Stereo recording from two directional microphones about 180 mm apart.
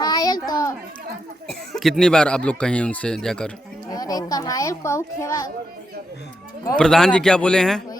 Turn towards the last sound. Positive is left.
turn(degrees=5)  # may be behind; listen again after turning